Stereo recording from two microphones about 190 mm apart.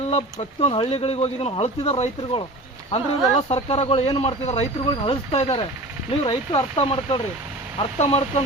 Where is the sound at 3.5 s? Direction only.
30° left (ahead or behind).